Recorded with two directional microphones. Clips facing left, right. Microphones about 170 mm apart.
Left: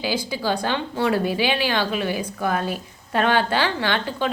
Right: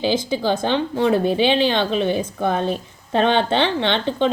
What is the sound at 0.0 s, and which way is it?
Speech, 25° right (ahead or behind).